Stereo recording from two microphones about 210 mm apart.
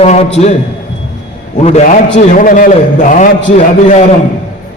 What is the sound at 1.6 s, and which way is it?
A man's voice, 30° left (ahead or behind).